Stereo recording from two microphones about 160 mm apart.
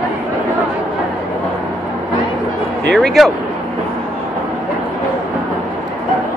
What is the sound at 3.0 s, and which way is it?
Speech, centre (ahead or behind).